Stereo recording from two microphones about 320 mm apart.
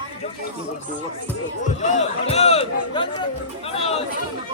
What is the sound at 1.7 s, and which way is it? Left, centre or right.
Speech, left.